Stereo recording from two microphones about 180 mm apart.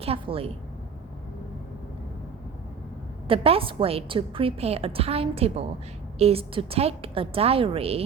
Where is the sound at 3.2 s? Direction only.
30° right (ahead or behind).